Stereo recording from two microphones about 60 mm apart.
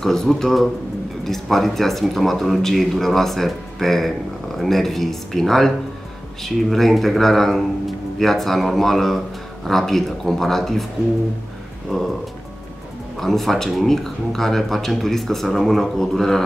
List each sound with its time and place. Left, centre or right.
0.0 s speech: centre
11.9 s speech: centre
13.2 s speech: centre